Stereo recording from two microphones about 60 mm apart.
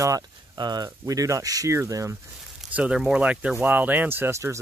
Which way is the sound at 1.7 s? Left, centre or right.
Right.